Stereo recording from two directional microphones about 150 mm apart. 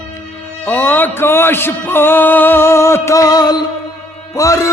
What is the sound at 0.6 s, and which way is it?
Music, 10° left (ahead or behind).